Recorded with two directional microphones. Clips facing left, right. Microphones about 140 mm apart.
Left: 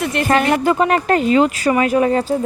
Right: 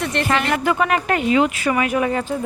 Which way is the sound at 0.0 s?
5° left (ahead or behind).